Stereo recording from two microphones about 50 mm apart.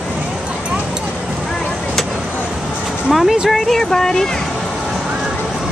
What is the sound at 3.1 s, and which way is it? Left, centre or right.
Speech, centre.